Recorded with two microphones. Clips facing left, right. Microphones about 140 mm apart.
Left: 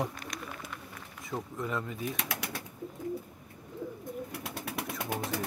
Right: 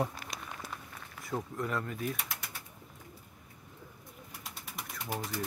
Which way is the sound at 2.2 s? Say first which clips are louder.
Left 7 dB; 75° left (ahead or behind).